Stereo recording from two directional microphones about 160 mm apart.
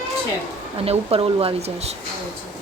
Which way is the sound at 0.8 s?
35° right (ahead or behind).